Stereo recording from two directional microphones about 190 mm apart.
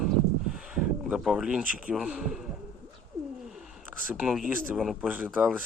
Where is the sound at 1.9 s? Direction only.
5° right (ahead or behind).